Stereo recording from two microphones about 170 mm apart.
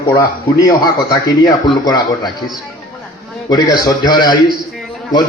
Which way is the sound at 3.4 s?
20° left (ahead or behind).